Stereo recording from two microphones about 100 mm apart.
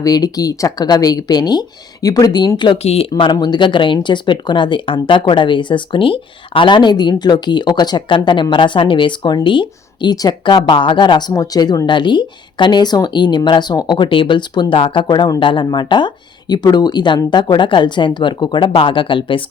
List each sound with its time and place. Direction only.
0.0 s speech: 35° left (ahead or behind)
2.7 s speech: 90° left
3.1 s speech: 55° left (ahead or behind)
15.0 s speech: 45° left (ahead or behind)
18.7 s speech: 65° left (ahead or behind)